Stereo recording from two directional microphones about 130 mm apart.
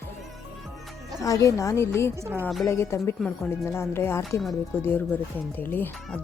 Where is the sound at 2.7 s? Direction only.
20° left (ahead or behind).